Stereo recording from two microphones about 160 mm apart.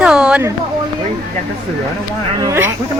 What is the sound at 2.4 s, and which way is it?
Speech, 15° right (ahead or behind).